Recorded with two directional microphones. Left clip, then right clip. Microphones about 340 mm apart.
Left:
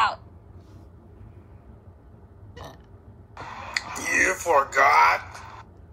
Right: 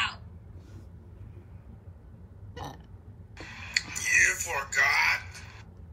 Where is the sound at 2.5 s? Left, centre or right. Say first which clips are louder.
Right 1 dB; centre.